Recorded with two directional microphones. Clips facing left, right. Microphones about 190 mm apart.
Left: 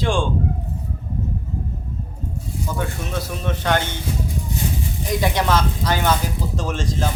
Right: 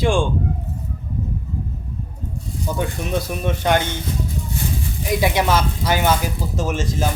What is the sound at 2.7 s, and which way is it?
Speech, 15° right (ahead or behind).